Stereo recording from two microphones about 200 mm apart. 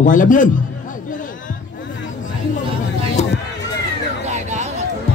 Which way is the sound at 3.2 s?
35° left (ahead or behind).